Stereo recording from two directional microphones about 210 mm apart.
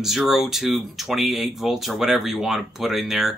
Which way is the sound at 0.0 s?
Centre (ahead or behind).